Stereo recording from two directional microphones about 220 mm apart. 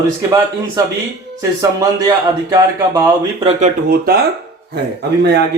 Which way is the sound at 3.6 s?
45° right (ahead or behind).